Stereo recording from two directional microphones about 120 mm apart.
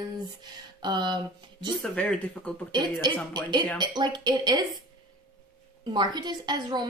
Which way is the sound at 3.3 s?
40° right (ahead or behind).